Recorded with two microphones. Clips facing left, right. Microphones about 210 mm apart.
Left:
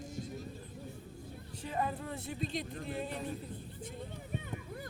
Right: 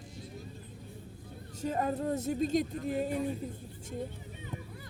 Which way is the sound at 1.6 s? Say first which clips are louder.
Right 6 dB; 45° right (ahead or behind).